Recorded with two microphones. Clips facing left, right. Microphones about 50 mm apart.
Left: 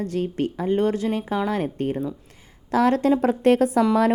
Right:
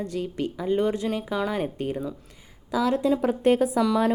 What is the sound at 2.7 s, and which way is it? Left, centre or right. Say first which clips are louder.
A woman's voice: left 4 dB; left.